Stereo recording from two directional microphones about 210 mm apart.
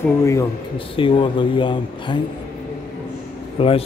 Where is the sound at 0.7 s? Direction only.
25° left (ahead or behind).